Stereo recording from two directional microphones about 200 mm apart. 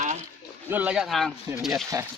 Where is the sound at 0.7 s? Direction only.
5° right (ahead or behind).